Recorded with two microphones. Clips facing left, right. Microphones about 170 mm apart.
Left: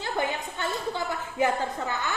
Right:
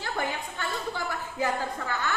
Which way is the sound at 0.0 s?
20° left (ahead or behind).